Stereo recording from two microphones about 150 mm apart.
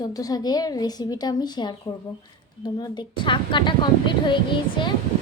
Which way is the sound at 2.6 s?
30° left (ahead or behind).